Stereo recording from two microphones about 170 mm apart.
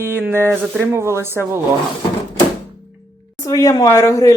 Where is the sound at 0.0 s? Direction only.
10° right (ahead or behind).